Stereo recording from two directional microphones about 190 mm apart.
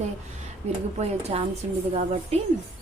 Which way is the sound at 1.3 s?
35° right (ahead or behind).